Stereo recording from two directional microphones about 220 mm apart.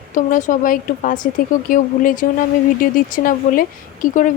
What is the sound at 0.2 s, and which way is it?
Speech, 35° left (ahead or behind).